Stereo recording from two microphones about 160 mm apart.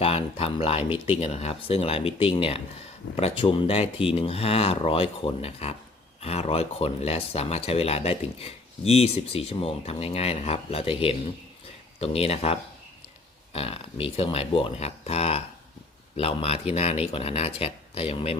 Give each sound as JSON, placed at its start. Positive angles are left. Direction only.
{"t": 0.0, "sound": "speech", "side_deg": 35}
{"t": 0.9, "sound": "speech", "side_deg": -10}
{"t": 1.2, "sound": "speech", "side_deg": 40}